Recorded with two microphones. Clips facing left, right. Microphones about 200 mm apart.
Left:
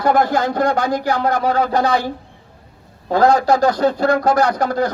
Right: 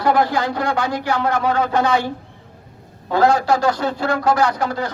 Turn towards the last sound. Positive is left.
turn(degrees=40)  # may be behind; listen again after turning